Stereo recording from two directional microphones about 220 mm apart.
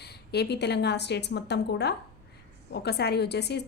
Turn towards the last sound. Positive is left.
turn(degrees=50)  # may be behind; listen again after turning